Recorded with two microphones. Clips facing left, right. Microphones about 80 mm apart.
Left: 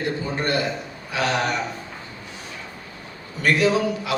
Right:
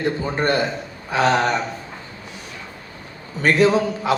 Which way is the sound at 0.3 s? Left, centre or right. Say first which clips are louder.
Right 3 dB; right.